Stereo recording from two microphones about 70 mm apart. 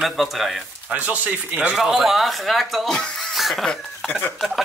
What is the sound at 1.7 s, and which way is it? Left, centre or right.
Speech, centre.